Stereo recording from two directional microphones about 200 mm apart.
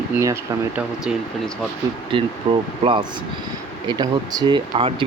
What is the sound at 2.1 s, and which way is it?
A man's voice, 25° right (ahead or behind).